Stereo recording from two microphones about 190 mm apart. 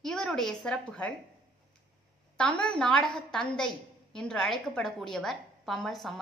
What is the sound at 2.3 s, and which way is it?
A woman's voice, 5° left (ahead or behind).